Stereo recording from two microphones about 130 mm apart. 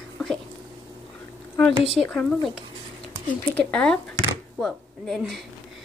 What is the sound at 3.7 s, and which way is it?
A woman's voice, 10° left (ahead or behind).